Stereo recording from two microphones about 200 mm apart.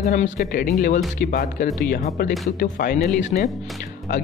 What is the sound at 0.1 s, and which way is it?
Speech, 40° left (ahead or behind).